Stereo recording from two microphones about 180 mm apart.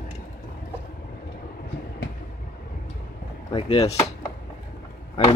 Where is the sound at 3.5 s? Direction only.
30° left (ahead or behind).